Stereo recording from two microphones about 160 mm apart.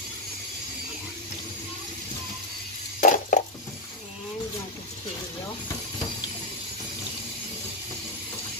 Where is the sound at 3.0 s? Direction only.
50° left (ahead or behind).